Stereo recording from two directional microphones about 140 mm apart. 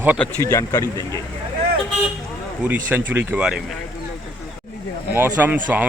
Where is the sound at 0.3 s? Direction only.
20° left (ahead or behind).